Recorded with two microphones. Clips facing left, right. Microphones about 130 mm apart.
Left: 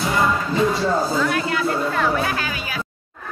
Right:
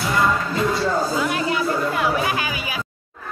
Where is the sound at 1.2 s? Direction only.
10° right (ahead or behind).